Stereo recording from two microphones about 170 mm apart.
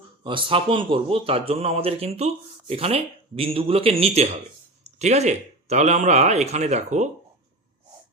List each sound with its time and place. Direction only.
0.3 s a man's voice: 30° right (ahead or behind)